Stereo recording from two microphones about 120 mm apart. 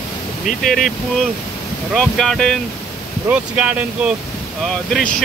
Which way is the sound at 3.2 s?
10° right (ahead or behind).